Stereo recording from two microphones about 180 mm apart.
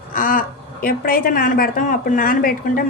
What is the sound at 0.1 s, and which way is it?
A woman's voice, 50° left (ahead or behind).